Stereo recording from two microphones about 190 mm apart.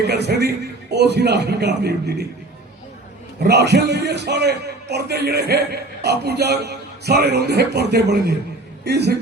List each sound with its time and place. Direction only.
0.0 s a man's voice: 60° right (ahead or behind)
3.4 s a man's voice: 60° right (ahead or behind)